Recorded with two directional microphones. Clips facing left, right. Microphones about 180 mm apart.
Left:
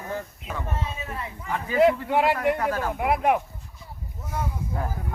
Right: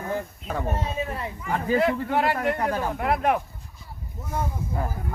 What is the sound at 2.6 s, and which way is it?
Speech, 20° right (ahead or behind).